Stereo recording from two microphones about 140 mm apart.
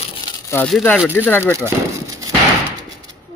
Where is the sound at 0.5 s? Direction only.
20° left (ahead or behind).